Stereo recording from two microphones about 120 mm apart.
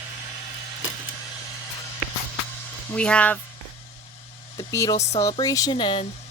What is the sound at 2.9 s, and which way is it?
Speech, 10° left (ahead or behind).